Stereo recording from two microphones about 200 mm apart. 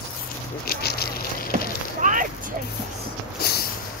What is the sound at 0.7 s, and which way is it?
Patter, 50° left (ahead or behind).